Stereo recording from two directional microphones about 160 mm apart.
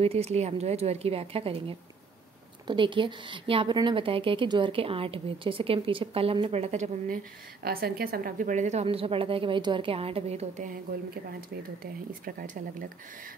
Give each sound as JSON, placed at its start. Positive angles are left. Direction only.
{"t": 0.0, "sound": "a woman's voice", "side_deg": -40}
{"t": 7.6, "sound": "a woman's voice", "side_deg": -75}
{"t": 8.8, "sound": "a woman's voice", "side_deg": -35}
{"t": 11.8, "sound": "a woman's voice", "side_deg": -65}